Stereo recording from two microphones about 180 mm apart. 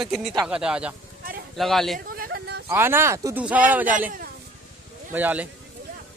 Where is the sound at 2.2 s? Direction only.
60° right (ahead or behind).